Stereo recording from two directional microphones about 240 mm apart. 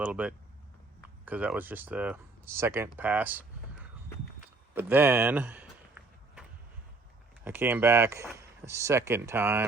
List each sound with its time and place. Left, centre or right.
0.0 s speech: centre
4.7 s a sound: centre
7.4 s speech: centre